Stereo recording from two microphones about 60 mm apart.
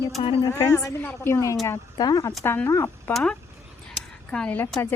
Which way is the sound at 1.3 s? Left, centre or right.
Left.